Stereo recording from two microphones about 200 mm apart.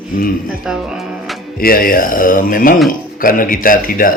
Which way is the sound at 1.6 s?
45° left (ahead or behind).